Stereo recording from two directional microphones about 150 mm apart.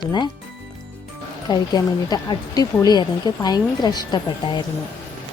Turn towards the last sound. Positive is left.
turn(degrees=30)  # may be behind; listen again after turning